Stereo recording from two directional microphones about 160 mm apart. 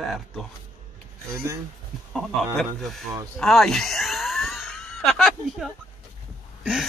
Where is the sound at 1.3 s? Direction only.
20° right (ahead or behind).